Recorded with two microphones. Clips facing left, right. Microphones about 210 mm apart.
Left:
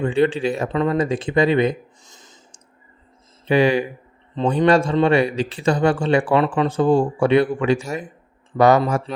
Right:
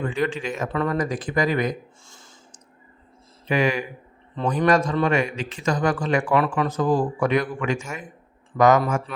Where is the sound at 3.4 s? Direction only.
30° left (ahead or behind).